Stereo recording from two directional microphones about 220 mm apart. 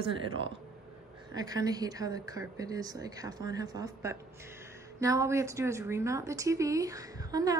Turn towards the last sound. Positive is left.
turn(degrees=-15)  # may be behind; listen again after turning